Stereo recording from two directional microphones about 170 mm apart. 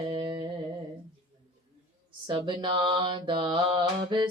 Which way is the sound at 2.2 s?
30° right (ahead or behind).